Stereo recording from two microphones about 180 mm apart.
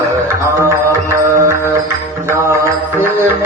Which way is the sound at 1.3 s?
15° right (ahead or behind).